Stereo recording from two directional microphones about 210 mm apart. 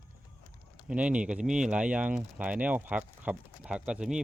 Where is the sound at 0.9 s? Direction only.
5° right (ahead or behind).